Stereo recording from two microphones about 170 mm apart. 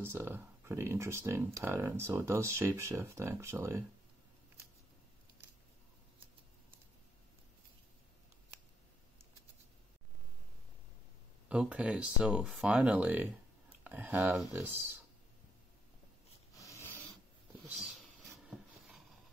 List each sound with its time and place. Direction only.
0.0 s speech: 15° right (ahead or behind)
11.4 s speech: 5° right (ahead or behind)
16.5 s a sound: 15° left (ahead or behind)